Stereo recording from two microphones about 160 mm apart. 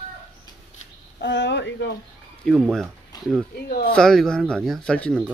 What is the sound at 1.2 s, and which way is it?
Speech, 90° left.